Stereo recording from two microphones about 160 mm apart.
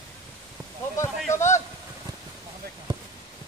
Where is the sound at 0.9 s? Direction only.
15° left (ahead or behind).